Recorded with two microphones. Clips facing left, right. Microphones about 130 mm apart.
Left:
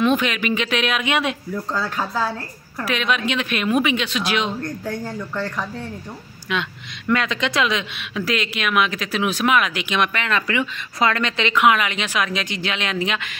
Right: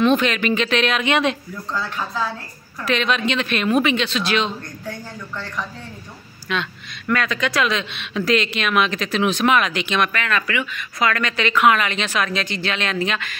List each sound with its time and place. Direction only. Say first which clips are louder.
0.0 s speech: right 2 dB; 10° left (ahead or behind)
1.7 s speech: even; 35° left (ahead or behind)
2.8 s speech: right 1 dB; 10° left (ahead or behind)
6.5 s speech: even; 15° left (ahead or behind)